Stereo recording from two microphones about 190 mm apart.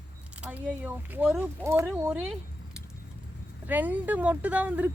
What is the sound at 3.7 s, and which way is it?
Speech, 10° right (ahead or behind).